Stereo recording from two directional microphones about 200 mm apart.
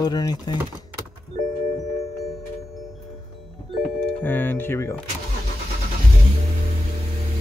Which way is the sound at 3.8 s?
5° left (ahead or behind).